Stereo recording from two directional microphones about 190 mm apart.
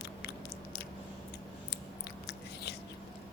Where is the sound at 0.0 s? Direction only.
60° left (ahead or behind).